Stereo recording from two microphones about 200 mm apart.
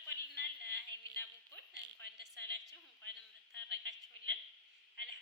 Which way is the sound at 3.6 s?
65° right (ahead or behind).